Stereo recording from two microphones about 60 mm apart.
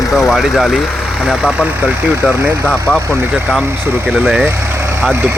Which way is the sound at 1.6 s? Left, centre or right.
Right.